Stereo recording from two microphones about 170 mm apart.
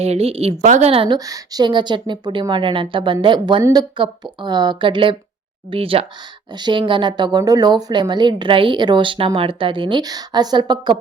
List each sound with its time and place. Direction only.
0.0 s a woman's voice: 35° right (ahead or behind)